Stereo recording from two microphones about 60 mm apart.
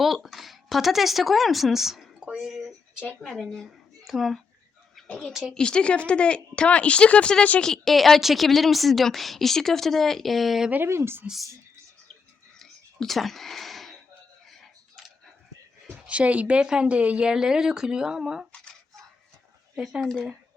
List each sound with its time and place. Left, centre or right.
0.0 s a woman's voice: centre
3.2 s speech: centre
4.9 s a sound: centre
5.3 s a woman's voice: centre
5.5 s speech: centre
7.6 s a woman's voice: centre
10.8 s speech: right
12.5 s a sound: centre
16.0 s a woman's voice: right
19.7 s speech: centre